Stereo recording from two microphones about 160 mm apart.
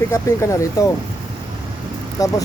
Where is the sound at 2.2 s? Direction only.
20° left (ahead or behind).